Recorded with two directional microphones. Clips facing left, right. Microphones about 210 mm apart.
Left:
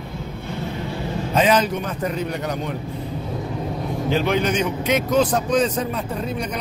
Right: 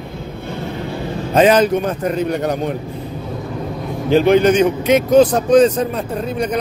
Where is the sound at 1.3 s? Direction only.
50° right (ahead or behind).